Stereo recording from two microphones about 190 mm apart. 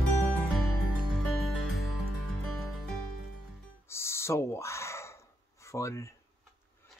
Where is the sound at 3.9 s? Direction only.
15° left (ahead or behind).